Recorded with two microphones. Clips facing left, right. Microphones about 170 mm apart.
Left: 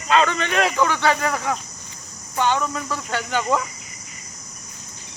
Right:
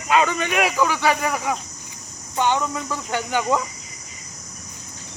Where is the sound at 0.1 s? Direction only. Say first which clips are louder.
Even; 10° right (ahead or behind).